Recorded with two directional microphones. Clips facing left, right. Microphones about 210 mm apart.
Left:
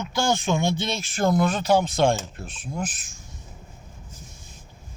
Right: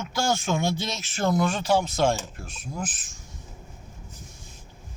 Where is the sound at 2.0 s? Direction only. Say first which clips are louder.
Left 2 dB; 5° right (ahead or behind).